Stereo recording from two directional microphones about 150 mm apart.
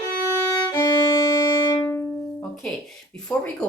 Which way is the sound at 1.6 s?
30° left (ahead or behind).